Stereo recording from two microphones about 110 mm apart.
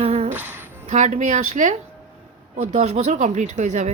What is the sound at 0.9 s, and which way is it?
Speech, 90° right.